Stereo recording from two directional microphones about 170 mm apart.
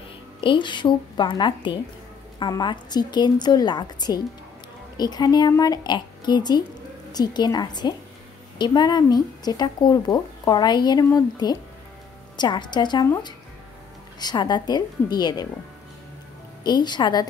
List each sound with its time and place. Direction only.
0.4 s speech: 30° left (ahead or behind)
16.6 s speech: 25° left (ahead or behind)